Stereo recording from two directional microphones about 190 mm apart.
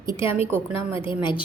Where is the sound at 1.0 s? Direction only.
25° left (ahead or behind).